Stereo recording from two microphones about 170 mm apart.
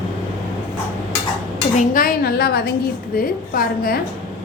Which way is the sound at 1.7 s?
55° left (ahead or behind).